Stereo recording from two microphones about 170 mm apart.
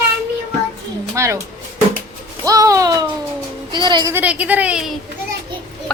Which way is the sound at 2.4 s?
20° right (ahead or behind).